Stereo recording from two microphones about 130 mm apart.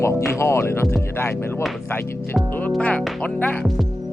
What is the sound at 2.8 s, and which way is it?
Speech, 10° left (ahead or behind).